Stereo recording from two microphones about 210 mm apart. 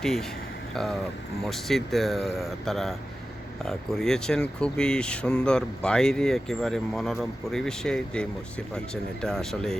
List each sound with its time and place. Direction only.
0.0 s speech: centre (ahead or behind)